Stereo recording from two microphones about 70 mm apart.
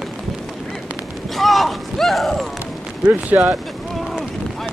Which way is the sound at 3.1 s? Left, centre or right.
Right.